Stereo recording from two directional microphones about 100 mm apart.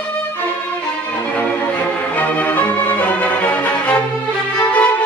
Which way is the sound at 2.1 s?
15° left (ahead or behind).